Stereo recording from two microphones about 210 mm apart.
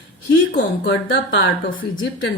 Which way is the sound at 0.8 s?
55° left (ahead or behind).